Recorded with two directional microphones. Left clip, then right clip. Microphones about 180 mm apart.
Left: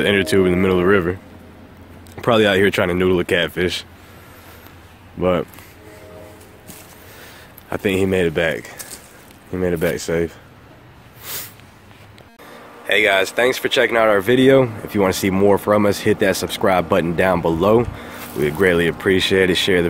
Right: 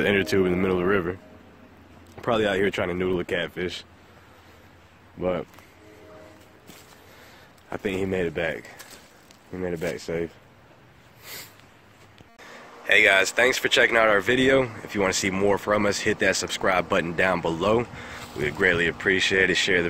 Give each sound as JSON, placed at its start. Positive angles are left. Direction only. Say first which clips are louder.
{"t": 0.0, "sound": "speech", "louder": "left 6 dB", "side_deg": -25}
{"t": 2.1, "sound": "speech", "louder": "left 8 dB", "side_deg": 0}
{"t": 5.2, "sound": "speech", "louder": "left 9 dB", "side_deg": 5}
{"t": 7.7, "sound": "speech", "louder": "left 9 dB", "side_deg": 0}
{"t": 11.3, "sound": "a sound", "louder": "left 8 dB", "side_deg": 0}
{"t": 12.4, "sound": "speech", "louder": "left 2 dB", "side_deg": 5}